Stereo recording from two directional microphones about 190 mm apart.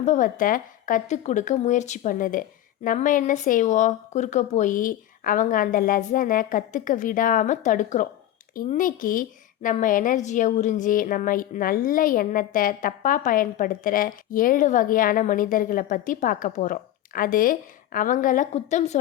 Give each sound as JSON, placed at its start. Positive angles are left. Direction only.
{"t": 0.0, "sound": "a woman's voice", "side_deg": 40}